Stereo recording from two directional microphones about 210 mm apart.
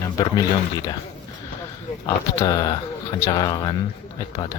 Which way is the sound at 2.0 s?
15° left (ahead or behind).